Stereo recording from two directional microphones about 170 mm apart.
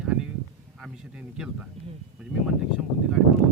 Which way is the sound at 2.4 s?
5° right (ahead or behind).